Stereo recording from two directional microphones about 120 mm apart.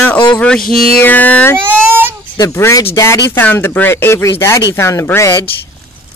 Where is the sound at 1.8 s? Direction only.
20° right (ahead or behind).